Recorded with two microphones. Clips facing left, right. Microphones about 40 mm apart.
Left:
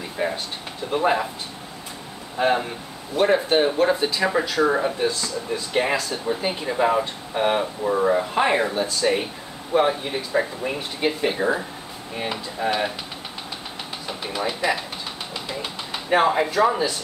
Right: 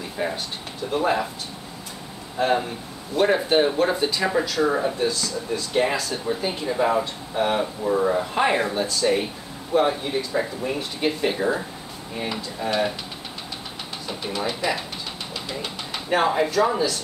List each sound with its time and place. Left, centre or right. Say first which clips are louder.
0.2 s a sound: left 2 dB; centre
0.9 s speech: left 1 dB; centre
2.3 s speech: left 1 dB; centre
3.2 s speech: even; centre
5.9 s speech: left 1 dB; centre
6.4 s speech: left 1 dB; centre
10.6 s speech: even; left
11.0 s speech: left 1 dB; centre
14.0 s speech: even; centre